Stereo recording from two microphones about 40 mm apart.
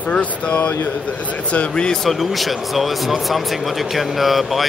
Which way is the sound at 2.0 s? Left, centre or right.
Centre.